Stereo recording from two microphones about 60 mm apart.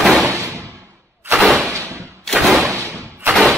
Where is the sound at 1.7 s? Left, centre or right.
Right.